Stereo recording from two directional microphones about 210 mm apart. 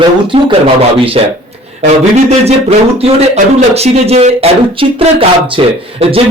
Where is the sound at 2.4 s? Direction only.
30° right (ahead or behind).